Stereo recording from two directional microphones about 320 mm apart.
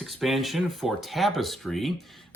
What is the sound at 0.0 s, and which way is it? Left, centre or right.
Speech, centre.